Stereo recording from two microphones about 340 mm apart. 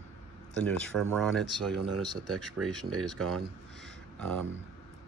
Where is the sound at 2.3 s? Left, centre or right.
Centre.